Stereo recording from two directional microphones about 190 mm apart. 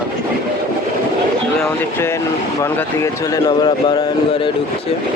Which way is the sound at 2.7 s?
15° left (ahead or behind).